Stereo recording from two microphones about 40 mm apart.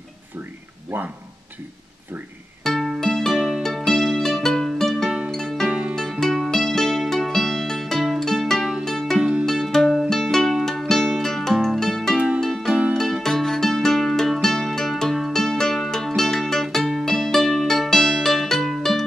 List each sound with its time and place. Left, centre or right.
3.0 s music: centre
3.3 s music: right
3.6 s music: centre
5.7 s music: right
6.1 s music: centre
8.5 s music: centre
8.8 s music: centre